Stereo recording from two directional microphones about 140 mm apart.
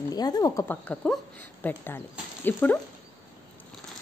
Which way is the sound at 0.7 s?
10° left (ahead or behind).